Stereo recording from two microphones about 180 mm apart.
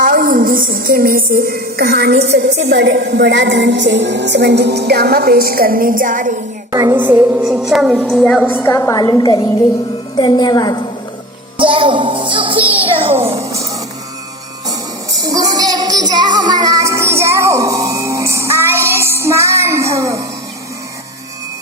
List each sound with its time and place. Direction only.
0.0 s a woman's voice: 50° right (ahead or behind)
6.7 s a woman's voice: 15° right (ahead or behind); by 10.8 s 25° left (ahead or behind)
11.5 s music: 30° right (ahead or behind)
12.8 s a sound: 30° right (ahead or behind)
15.2 s music: 20° right (ahead or behind)